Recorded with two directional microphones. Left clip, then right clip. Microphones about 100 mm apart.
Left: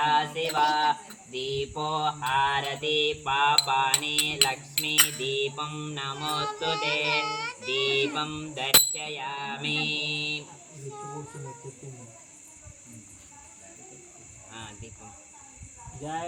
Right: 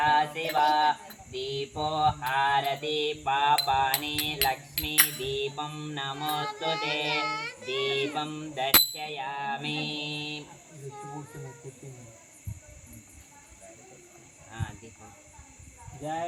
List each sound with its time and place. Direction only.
0.0 s mantra: 20° left (ahead or behind)
0.4 s music: 10° left (ahead or behind); by 3.9 s 25° left (ahead or behind)
3.9 s music: 35° left (ahead or behind)
9.7 s mantra: 35° right (ahead or behind)
10.0 s a sound: 25° left (ahead or behind)
10.9 s a child's voice: 15° left (ahead or behind)
14.5 s cricket: 30° left (ahead or behind)